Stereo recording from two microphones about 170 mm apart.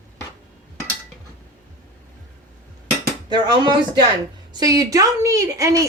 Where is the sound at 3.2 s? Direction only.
25° right (ahead or behind).